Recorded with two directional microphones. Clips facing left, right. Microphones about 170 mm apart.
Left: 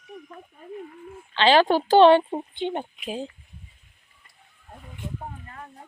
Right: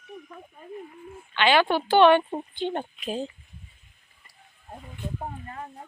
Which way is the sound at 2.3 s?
20° left (ahead or behind).